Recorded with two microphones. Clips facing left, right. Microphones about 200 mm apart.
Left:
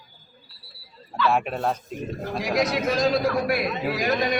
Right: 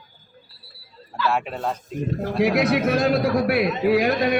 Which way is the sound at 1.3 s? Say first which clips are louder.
Left 1 dB; 10° left (ahead or behind).